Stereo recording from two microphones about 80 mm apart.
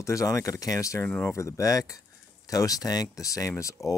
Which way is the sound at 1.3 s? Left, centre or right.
Left.